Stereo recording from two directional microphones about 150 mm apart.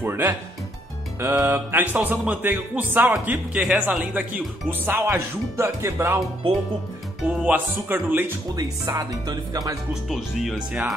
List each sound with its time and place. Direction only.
0.0 s music: 15° right (ahead or behind)
7.2 s music: 10° right (ahead or behind)
8.5 s speech: 25° right (ahead or behind)
10.0 s speech: centre (ahead or behind)